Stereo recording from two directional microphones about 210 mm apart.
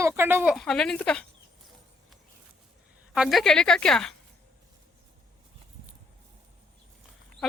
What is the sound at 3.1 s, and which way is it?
Speech, centre (ahead or behind).